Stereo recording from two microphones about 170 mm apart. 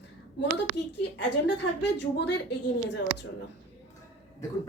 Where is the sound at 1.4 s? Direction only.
80° left.